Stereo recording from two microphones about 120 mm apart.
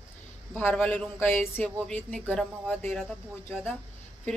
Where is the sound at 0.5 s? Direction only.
15° left (ahead or behind).